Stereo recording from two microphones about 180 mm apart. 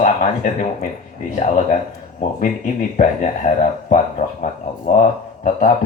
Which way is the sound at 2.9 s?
45° left (ahead or behind).